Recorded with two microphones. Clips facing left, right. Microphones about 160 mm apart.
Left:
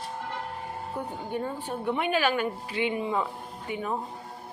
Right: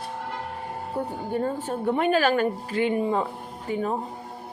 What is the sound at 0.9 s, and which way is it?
A woman's voice, 40° right (ahead or behind).